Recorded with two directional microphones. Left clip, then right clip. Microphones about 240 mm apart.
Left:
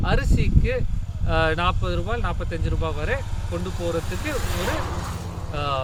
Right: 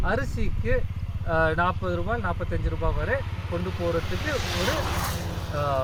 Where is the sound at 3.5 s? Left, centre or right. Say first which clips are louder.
Left 1 dB; left.